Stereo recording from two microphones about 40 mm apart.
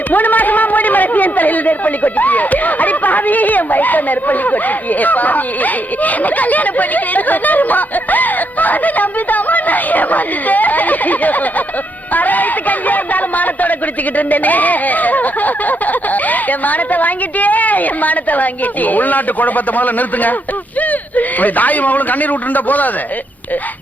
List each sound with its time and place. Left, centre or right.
0.1 s a man's voice: left